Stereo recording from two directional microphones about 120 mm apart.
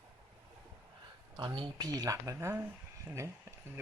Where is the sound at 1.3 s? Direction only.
40° right (ahead or behind).